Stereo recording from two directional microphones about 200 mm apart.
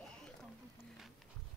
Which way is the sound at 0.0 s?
5° left (ahead or behind).